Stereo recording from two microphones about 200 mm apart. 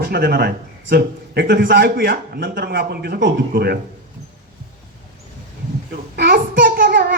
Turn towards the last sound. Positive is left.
turn(degrees=-50)  # may be behind; listen again after turning